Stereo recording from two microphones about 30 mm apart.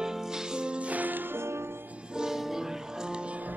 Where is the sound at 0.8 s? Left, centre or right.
Right.